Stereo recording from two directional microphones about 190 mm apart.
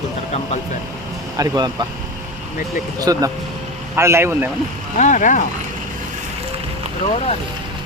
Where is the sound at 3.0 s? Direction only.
20° right (ahead or behind).